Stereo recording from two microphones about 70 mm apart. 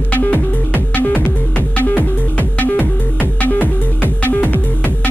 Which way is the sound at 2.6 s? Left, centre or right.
Left.